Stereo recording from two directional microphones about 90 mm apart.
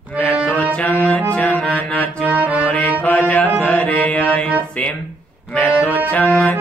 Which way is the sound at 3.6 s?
15° left (ahead or behind).